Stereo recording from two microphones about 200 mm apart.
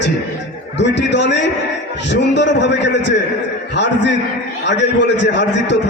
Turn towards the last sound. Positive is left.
turn(degrees=65)  # may be behind; listen again after turning